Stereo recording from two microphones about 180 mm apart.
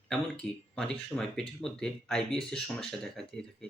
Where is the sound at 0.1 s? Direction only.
5° left (ahead or behind).